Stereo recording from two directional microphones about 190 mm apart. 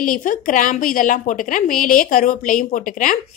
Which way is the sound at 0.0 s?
45° left (ahead or behind).